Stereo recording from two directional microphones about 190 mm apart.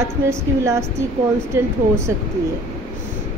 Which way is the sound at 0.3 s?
15° right (ahead or behind).